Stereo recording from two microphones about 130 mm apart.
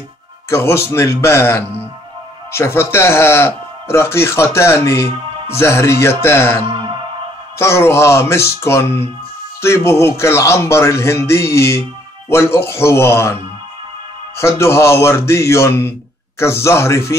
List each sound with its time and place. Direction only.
0.5 s speech: 20° left (ahead or behind)
6.7 s music: 40° right (ahead or behind)
7.5 s speech: 20° left (ahead or behind)